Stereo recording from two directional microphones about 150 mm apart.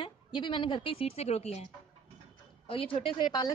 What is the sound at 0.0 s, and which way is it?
Speech, 30° left (ahead or behind).